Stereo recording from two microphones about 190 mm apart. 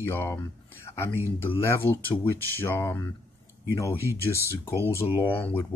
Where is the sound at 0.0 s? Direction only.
10° left (ahead or behind).